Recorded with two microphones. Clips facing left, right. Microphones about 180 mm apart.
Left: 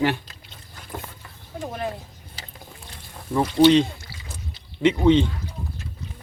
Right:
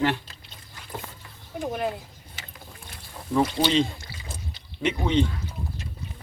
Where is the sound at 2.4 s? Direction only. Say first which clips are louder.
Left 2 dB; 35° left (ahead or behind).